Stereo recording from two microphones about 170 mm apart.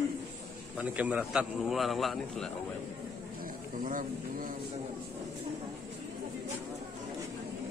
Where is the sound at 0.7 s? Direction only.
10° right (ahead or behind).